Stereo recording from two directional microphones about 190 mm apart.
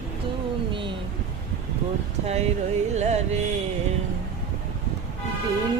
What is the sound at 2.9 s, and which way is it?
Music, 35° right (ahead or behind).